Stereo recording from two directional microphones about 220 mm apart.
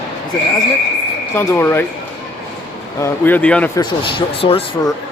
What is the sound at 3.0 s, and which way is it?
Speech, 5° left (ahead or behind).